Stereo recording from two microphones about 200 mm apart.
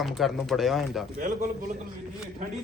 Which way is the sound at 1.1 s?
40° right (ahead or behind).